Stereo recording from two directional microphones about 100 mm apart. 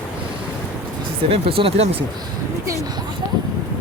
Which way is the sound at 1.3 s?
70° right (ahead or behind).